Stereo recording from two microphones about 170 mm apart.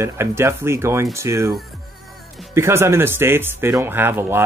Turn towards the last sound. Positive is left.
turn(degrees=-15)  # may be behind; listen again after turning